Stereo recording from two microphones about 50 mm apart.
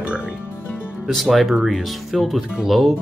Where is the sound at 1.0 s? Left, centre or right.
Centre.